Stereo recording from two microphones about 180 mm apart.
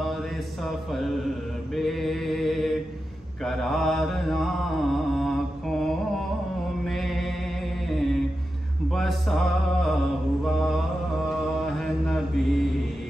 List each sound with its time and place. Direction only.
0.7 s music: centre (ahead or behind)
1.8 s mantra: centre (ahead or behind)
6.8 s chant: centre (ahead or behind)
7.9 s mantra: centre (ahead or behind)
11.6 s mantra: centre (ahead or behind)